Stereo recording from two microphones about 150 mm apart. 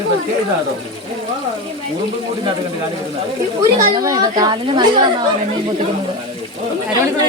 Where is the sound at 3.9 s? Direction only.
25° right (ahead or behind).